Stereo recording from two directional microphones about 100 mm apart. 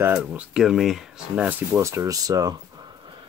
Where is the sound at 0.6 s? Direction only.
Centre (ahead or behind).